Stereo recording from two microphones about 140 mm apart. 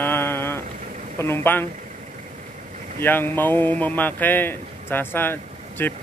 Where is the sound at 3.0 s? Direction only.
15° left (ahead or behind).